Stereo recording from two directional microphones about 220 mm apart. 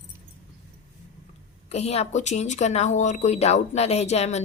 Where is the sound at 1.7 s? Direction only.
30° left (ahead or behind).